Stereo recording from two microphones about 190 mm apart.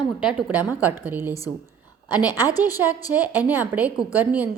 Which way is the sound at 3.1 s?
10° right (ahead or behind).